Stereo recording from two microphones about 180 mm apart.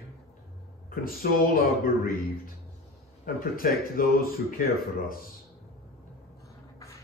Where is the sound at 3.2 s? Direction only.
50° left (ahead or behind).